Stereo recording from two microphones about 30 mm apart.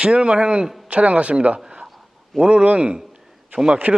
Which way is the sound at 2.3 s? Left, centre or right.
Right.